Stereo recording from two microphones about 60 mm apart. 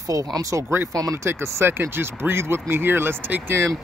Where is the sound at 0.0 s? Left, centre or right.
Right.